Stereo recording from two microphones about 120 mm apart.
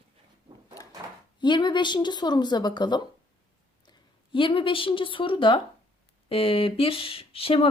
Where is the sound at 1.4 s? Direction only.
40° left (ahead or behind).